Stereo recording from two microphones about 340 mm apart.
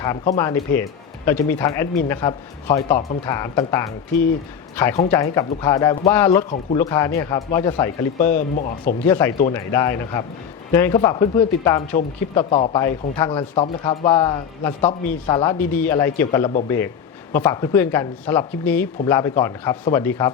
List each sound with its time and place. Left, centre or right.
0.0 s speech: centre
4.9 s speech: centre
9.0 s speech: centre